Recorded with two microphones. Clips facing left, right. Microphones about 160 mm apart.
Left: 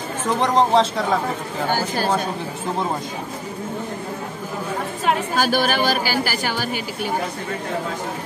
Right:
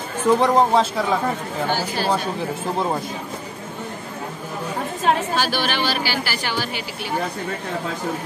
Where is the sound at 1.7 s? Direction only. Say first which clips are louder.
Left 3 dB; 45° left (ahead or behind).